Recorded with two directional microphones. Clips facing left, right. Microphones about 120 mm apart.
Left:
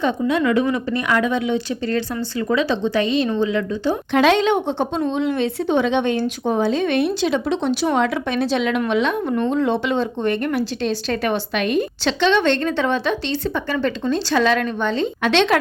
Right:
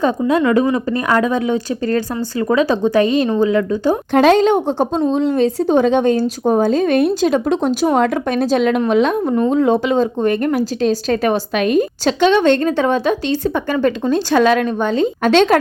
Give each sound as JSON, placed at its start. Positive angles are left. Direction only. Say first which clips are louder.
{"t": 0.0, "sound": "a woman's voice", "louder": "right 4 dB", "side_deg": -40}